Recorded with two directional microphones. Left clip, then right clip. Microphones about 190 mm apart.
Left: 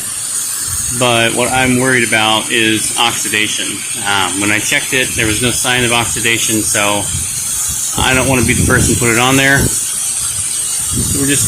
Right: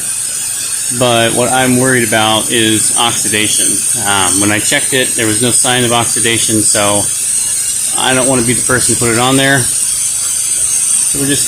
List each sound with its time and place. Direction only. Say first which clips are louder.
0.9 s speech: right 1 dB; 15° right (ahead or behind)